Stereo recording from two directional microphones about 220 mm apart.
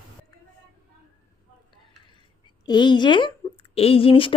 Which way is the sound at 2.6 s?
20° left (ahead or behind).